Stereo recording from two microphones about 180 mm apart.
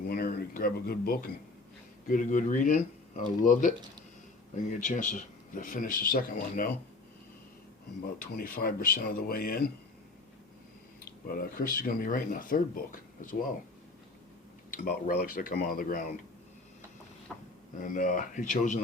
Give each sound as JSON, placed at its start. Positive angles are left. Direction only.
{"t": 0.1, "sound": "speech", "side_deg": 55}
{"t": 2.0, "sound": "speech", "side_deg": 45}
{"t": 4.7, "sound": "speech", "side_deg": 45}
{"t": 8.2, "sound": "speech", "side_deg": 50}
{"t": 11.0, "sound": "speech", "side_deg": 55}
{"t": 14.7, "sound": "speech", "side_deg": 55}
{"t": 17.3, "sound": "a sound", "side_deg": 0}
{"t": 17.8, "sound": "speech", "side_deg": 45}